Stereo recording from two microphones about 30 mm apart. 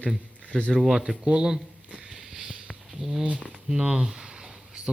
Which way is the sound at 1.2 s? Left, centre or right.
Right.